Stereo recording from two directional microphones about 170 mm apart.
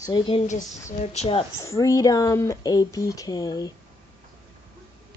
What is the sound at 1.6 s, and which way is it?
Speech, 20° left (ahead or behind).